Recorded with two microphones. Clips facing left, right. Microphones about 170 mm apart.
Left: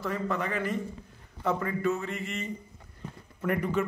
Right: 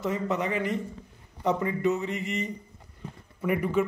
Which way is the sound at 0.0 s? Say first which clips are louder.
Right 3 dB; 20° right (ahead or behind).